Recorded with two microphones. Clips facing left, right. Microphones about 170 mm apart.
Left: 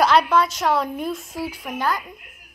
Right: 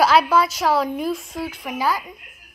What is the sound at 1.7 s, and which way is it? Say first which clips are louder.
Speech: right 2 dB; 5° right (ahead or behind).